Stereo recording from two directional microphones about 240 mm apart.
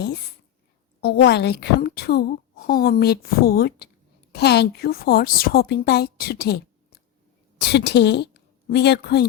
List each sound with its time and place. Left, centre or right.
1.0 s a woman's voice: left